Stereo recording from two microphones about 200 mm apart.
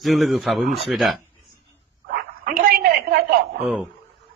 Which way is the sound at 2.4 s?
45° right (ahead or behind).